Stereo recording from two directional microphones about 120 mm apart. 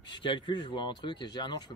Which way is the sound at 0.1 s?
40° left (ahead or behind).